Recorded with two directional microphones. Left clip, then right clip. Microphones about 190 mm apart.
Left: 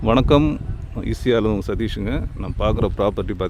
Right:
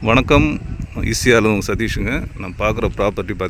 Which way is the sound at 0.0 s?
10° left (ahead or behind).